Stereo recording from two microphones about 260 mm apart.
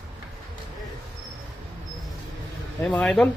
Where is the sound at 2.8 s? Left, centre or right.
Centre.